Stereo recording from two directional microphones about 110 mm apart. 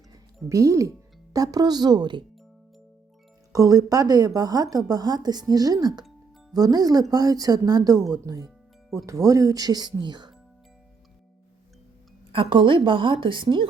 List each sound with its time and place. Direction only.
0.1 s speech: 30° right (ahead or behind)
3.5 s speech: 30° right (ahead or behind)
12.3 s a woman's voice: 55° right (ahead or behind)